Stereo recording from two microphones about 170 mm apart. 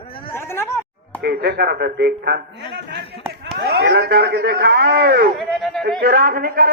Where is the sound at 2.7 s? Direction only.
85° right.